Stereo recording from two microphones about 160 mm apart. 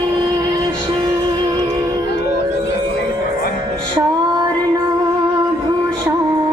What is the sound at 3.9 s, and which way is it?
Female singing, 25° right (ahead or behind).